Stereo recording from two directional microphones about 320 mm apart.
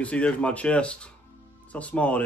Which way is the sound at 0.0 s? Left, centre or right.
Centre.